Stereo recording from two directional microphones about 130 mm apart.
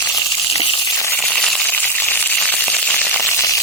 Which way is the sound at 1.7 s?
15° left (ahead or behind).